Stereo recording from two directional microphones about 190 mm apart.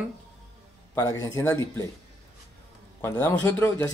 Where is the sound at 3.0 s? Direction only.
15° left (ahead or behind).